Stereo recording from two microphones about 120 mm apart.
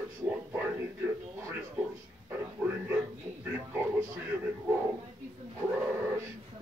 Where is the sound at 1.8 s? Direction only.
10° right (ahead or behind).